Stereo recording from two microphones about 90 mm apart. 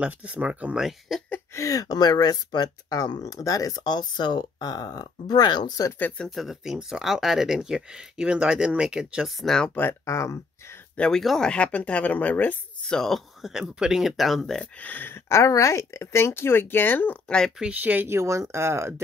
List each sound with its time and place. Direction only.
0.0 s speech: 15° right (ahead or behind)
0.8 s speech: centre (ahead or behind)
1.5 s speech: 35° left (ahead or behind)
5.9 s speech: 20° left (ahead or behind)
6.2 s speech: centre (ahead or behind)
9.8 s speech: 30° left (ahead or behind)
11.0 s speech: 5° left (ahead or behind)
12.9 s speech: 5° left (ahead or behind)
14.6 s speech: 15° left (ahead or behind)
17.6 s speech: 15° right (ahead or behind)